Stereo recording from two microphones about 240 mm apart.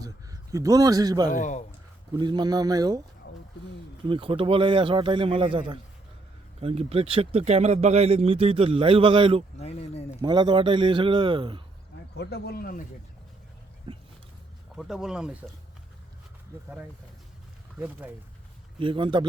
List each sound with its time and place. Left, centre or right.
0.0 s a sound: centre
1.3 s speech: left
2.1 s speech: centre
4.0 s speech: right
9.6 s speech: left
10.2 s speech: centre
12.1 s speech: left
13.9 s dog: right
14.8 s speech: centre
17.7 s speech: centre
18.8 s speech: right